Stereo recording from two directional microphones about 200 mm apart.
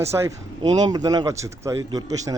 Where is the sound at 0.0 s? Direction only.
15° right (ahead or behind).